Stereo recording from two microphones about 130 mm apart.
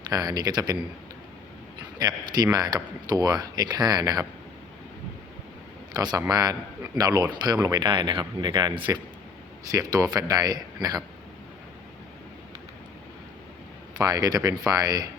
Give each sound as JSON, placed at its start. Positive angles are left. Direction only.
{"t": 0.1, "sound": "speech", "side_deg": -30}
{"t": 2.0, "sound": "speech", "side_deg": -30}
{"t": 5.9, "sound": "a man's voice", "side_deg": -30}
{"t": 14.0, "sound": "speech", "side_deg": -30}